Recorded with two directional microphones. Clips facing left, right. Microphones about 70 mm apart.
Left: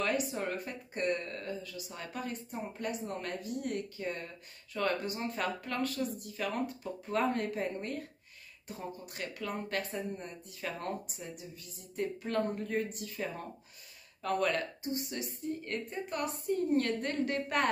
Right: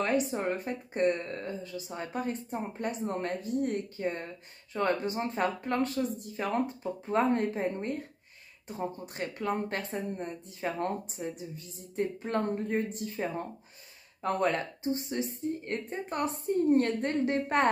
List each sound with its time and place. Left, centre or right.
0.0 s speech: right